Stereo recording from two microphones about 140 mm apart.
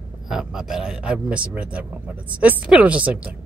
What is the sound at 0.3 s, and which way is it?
A man's voice, 5° right (ahead or behind).